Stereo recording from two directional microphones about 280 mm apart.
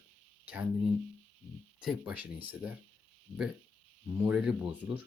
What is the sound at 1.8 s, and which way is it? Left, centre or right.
Speech, centre.